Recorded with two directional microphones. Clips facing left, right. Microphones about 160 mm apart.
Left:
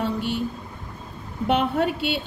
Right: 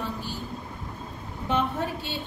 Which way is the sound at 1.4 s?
75° left (ahead or behind).